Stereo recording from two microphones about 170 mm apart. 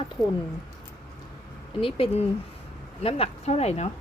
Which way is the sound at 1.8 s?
35° left (ahead or behind).